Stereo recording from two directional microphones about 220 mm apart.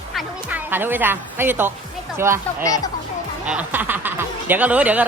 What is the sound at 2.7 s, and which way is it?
Speech, 15° left (ahead or behind).